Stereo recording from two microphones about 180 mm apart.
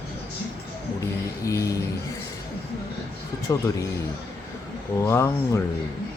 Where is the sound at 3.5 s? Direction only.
20° left (ahead or behind).